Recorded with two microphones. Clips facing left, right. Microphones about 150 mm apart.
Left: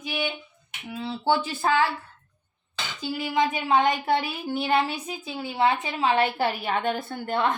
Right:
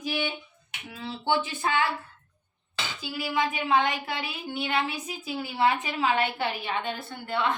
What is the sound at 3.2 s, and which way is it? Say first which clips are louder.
A woman's voice: left 3 dB; 35° left (ahead or behind).